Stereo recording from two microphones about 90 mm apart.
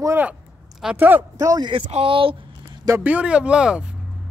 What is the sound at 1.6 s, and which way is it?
Speech, 75° right (ahead or behind).